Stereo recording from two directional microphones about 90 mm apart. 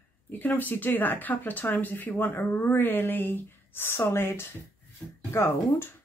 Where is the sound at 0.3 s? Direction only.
20° left (ahead or behind).